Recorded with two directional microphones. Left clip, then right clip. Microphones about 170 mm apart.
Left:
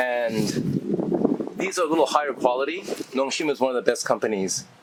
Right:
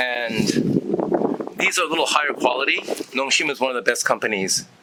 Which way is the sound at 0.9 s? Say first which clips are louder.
Even; 35° right (ahead or behind).